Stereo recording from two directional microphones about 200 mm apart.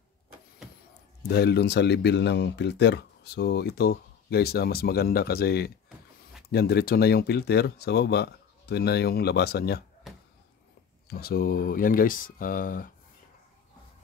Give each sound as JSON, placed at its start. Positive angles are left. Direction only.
{"t": 1.2, "sound": "speech", "side_deg": 55}
{"t": 11.1, "sound": "speech", "side_deg": 50}